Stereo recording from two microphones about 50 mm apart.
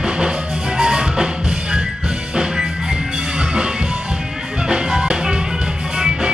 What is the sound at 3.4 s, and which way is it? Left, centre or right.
Music, centre.